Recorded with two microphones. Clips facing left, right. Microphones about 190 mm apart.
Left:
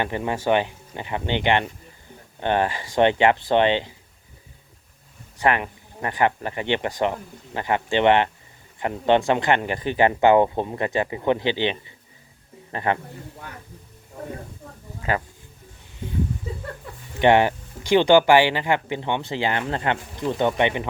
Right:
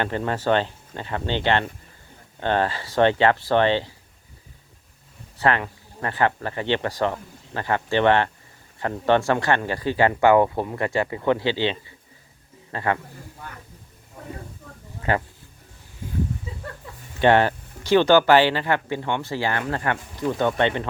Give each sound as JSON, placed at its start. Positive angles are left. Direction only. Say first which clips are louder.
{"t": 0.0, "sound": "speech", "louder": "even", "side_deg": 15}
{"t": 5.4, "sound": "speech", "louder": "even", "side_deg": 15}
{"t": 17.2, "sound": "speech", "louder": "left 1 dB", "side_deg": 15}